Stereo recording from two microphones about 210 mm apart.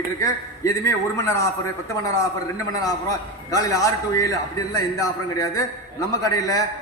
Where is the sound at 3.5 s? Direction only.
15° left (ahead or behind).